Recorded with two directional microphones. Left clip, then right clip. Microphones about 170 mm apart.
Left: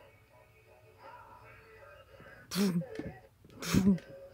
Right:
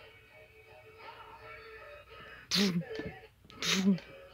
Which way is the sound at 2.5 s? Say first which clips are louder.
Right 4 dB; 20° left (ahead or behind).